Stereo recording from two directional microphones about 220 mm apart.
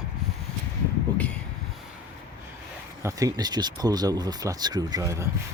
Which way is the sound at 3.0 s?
15° right (ahead or behind).